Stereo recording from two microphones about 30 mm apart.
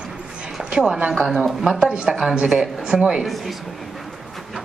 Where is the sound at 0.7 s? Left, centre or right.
Right.